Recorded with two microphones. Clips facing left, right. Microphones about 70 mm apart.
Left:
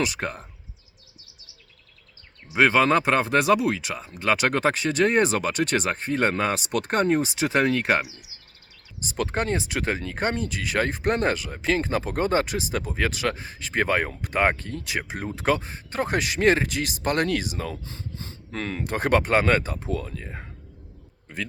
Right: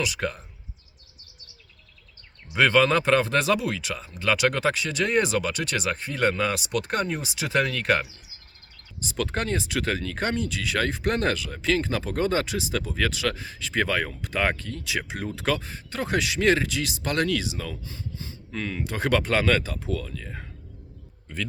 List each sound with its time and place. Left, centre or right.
0.0 s speech: left
2.5 s speech: left
8.0 s speech: centre
9.0 s speech: left